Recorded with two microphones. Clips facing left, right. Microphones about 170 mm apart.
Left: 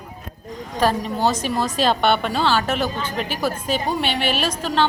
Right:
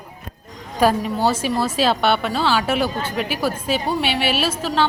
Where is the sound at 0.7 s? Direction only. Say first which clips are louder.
Right 2 dB; 10° right (ahead or behind).